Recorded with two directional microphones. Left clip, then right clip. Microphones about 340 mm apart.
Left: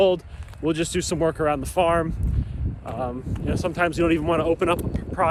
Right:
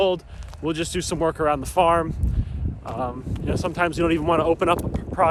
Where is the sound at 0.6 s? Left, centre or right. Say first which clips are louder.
Left 2 dB; centre.